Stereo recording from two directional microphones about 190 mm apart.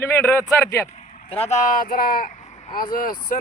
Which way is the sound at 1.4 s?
40° left (ahead or behind).